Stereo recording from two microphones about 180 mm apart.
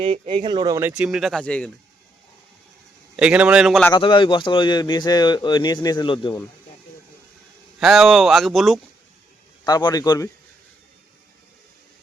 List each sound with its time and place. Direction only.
0.0 s speech: 25° right (ahead or behind)
0.8 s speech: 10° right (ahead or behind)
3.2 s speech: 5° right (ahead or behind)
3.9 s speech: 25° left (ahead or behind)
7.8 s speech: centre (ahead or behind)
9.6 s speech: 20° left (ahead or behind)